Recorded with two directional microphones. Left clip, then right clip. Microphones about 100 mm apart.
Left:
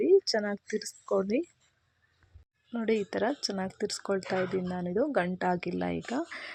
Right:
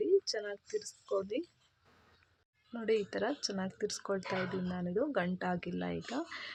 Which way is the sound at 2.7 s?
35° left (ahead or behind).